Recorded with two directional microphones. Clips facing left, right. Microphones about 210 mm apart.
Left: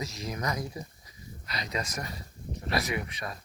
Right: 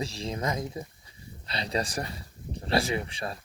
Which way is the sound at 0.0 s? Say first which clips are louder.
Right 3 dB; 30° right (ahead or behind).